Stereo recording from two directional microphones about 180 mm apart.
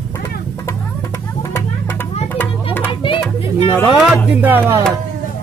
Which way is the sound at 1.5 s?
10° left (ahead or behind).